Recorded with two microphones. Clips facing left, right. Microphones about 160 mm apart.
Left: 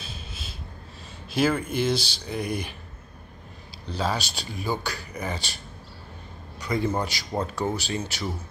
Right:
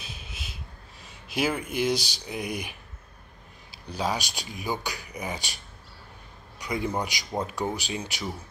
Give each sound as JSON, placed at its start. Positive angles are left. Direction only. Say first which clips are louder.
{"t": 0.0, "sound": "a sound", "louder": "left 2 dB", "side_deg": -15}
{"t": 1.3, "sound": "speech", "louder": "left 4 dB", "side_deg": -15}
{"t": 3.9, "sound": "speech", "louder": "left 1 dB", "side_deg": -15}
{"t": 6.6, "sound": "a man's voice", "louder": "left 3 dB", "side_deg": -10}